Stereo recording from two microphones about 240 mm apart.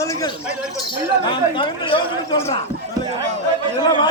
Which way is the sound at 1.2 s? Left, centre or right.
Left.